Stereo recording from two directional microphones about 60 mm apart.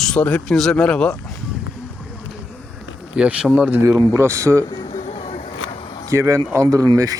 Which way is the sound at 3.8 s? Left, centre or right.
Right.